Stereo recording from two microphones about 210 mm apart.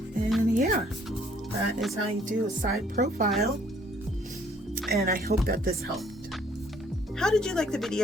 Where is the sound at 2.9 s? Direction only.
45° right (ahead or behind).